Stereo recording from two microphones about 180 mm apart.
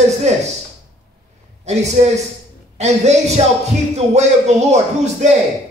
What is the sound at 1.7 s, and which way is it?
A man's voice, 40° right (ahead or behind).